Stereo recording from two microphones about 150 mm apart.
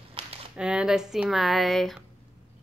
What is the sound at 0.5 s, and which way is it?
Speech, 5° right (ahead or behind).